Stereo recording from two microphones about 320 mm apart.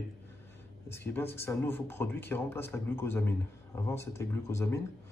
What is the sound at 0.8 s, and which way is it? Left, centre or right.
Speech, centre.